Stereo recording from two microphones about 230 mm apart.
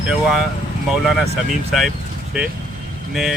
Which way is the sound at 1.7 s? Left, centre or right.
Centre.